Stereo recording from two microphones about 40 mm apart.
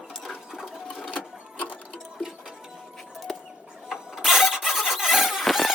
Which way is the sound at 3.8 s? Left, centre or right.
Centre.